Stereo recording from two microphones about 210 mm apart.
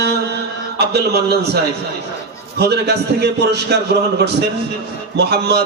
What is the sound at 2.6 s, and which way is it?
A man's voice, 50° right (ahead or behind).